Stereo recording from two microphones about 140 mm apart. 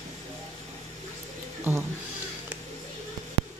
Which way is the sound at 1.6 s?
15° right (ahead or behind).